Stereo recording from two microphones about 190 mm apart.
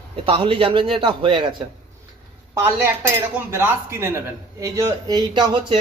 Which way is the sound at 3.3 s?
10° right (ahead or behind).